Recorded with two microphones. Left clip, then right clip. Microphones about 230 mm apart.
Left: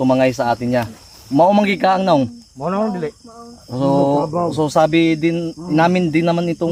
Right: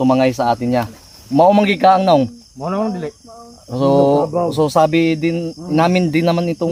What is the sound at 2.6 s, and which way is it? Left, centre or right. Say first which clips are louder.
Speech: left 1 dB; centre.